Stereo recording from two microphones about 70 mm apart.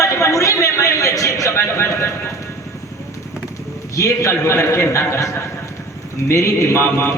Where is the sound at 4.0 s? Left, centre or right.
Left.